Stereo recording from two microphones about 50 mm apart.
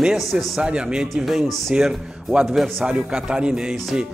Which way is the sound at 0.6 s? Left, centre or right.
Centre.